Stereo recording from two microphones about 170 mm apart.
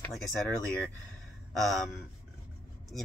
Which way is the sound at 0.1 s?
Centre (ahead or behind).